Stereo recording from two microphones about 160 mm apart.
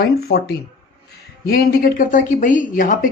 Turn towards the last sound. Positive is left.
turn(degrees=55)  # may be behind; listen again after turning